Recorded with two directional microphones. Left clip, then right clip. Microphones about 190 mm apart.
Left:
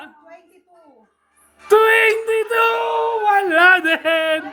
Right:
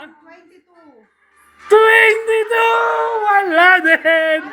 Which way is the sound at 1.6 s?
20° left (ahead or behind).